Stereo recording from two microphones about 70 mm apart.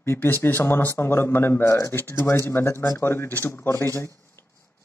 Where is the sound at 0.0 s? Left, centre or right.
Left.